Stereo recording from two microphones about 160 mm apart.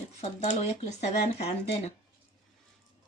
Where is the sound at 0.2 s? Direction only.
45° left (ahead or behind).